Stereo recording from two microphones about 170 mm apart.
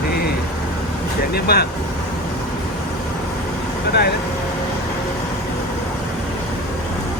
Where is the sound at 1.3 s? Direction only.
70° left (ahead or behind).